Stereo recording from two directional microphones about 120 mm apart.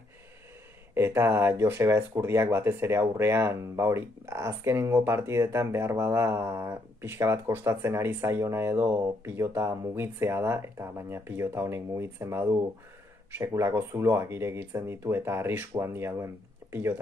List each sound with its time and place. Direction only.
0.9 s speech: 20° right (ahead or behind)